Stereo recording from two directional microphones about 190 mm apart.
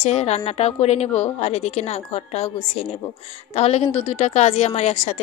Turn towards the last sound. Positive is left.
turn(degrees=35)  # may be behind; listen again after turning